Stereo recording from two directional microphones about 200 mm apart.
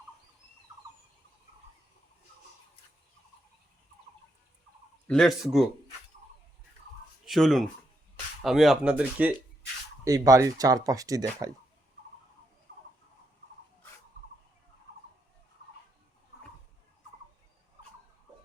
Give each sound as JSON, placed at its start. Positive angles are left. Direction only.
{"t": 5.0, "sound": "speech", "side_deg": 0}
{"t": 7.3, "sound": "speech", "side_deg": 0}
{"t": 10.0, "sound": "speech", "side_deg": -15}